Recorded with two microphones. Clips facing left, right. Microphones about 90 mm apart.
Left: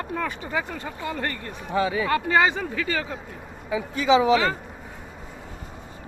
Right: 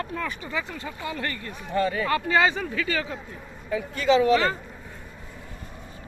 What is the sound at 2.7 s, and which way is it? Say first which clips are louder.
Speech: even; 40° left (ahead or behind).